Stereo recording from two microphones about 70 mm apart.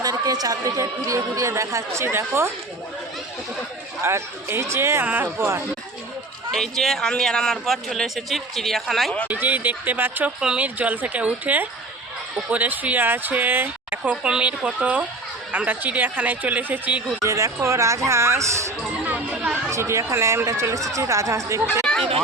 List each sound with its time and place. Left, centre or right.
0.0 s a sound: right
0.8 s speech: right
4.0 s speech: right
5.0 s speech: right
6.5 s speech: centre
9.2 s speech: right
10.4 s speech: centre
10.8 s speech: right
17.2 s speech: right
19.0 s chatter: right
19.7 s speech: right
21.9 s chatter: centre